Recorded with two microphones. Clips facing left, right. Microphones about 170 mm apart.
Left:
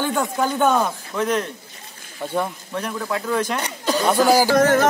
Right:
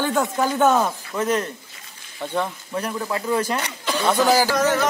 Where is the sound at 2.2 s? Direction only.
10° left (ahead or behind).